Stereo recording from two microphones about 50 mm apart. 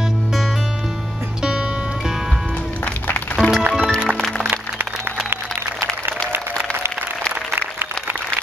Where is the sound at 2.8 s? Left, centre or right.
Left.